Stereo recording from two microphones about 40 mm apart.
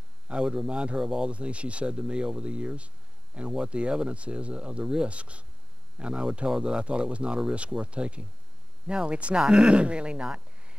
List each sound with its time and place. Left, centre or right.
0.3 s a man's voice: right
1.3 s speech: right